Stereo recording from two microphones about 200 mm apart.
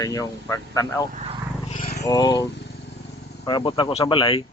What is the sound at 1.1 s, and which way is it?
Vehicle, 30° right (ahead or behind).